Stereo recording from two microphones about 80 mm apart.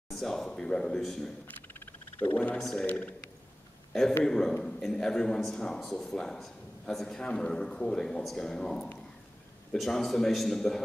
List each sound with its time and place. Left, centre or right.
0.1 s a man's voice: centre
1.7 s a man's voice: left
4.2 s a man's voice: centre